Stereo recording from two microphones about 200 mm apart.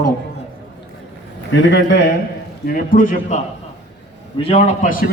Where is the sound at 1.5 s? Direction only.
65° left (ahead or behind).